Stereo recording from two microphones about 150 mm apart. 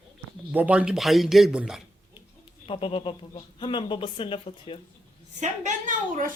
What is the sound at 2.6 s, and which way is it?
Speech, 40° left (ahead or behind).